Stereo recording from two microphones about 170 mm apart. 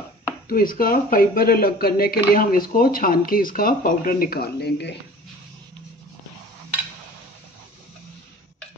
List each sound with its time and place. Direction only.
0.5 s speech: 55° left (ahead or behind); by 4.9 s 80° left